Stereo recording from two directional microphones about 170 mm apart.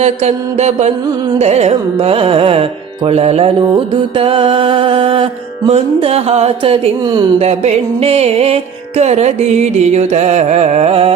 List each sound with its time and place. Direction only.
0.0 s music: 40° right (ahead or behind)